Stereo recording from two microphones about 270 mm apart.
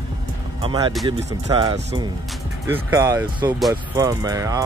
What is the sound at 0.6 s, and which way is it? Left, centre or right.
Speech, centre.